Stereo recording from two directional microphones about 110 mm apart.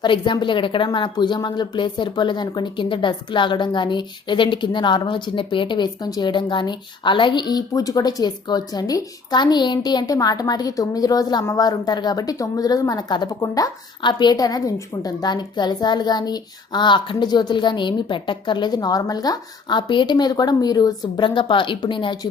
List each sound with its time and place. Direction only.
0.0 s a child's voice: 45° left (ahead or behind)
14.0 s a child's voice: 45° left (ahead or behind)